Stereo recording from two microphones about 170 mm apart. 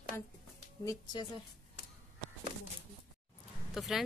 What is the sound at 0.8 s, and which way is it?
Speech, 20° left (ahead or behind).